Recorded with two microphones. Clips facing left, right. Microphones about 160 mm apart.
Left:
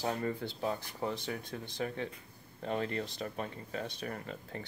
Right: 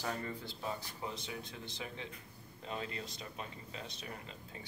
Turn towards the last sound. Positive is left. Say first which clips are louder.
# left 7 dB
turn(degrees=55)  # may be behind; listen again after turning